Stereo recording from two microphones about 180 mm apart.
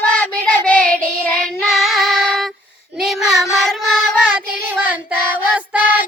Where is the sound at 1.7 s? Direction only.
Centre (ahead or behind).